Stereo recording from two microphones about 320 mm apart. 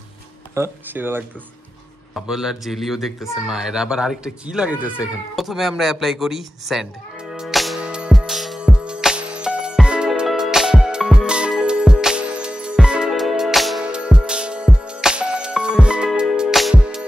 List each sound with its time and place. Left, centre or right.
0.6 s a man's voice: centre
7.3 s music: centre